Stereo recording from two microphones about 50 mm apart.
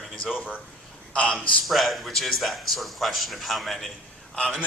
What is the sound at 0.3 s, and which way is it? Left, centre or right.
Speech, centre.